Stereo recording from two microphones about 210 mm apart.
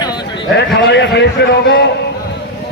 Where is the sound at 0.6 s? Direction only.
55° left (ahead or behind).